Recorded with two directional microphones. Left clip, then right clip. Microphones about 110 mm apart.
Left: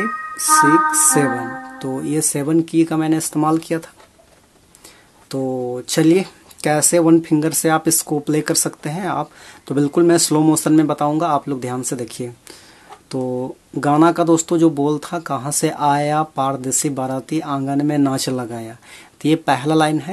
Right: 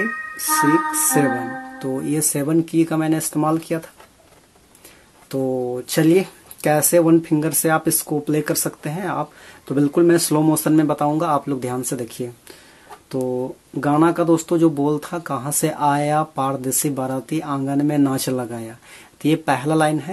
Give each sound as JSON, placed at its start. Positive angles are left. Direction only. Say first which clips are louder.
{"t": 0.5, "sound": "music", "louder": "left 5 dB", "side_deg": -40}
{"t": 1.3, "sound": "speech", "louder": "left 1 dB", "side_deg": -30}
{"t": 2.0, "sound": "speech", "louder": "left 2 dB", "side_deg": 30}
{"t": 5.3, "sound": "speech", "louder": "even", "side_deg": 35}
{"t": 5.6, "sound": "speech", "louder": "left 2 dB", "side_deg": 20}